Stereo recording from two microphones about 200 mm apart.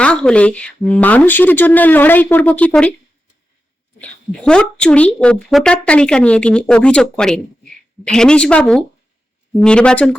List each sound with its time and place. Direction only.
0.0 s speech: 5° left (ahead or behind)
4.0 s speech: 5° left (ahead or behind)